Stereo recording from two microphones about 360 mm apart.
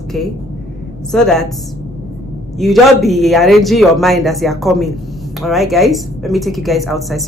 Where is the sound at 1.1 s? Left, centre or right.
Centre.